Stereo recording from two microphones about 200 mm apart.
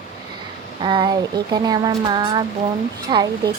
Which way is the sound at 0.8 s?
20° right (ahead or behind).